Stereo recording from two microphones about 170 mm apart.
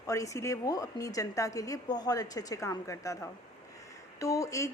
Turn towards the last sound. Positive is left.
turn(degrees=20)  # may be behind; listen again after turning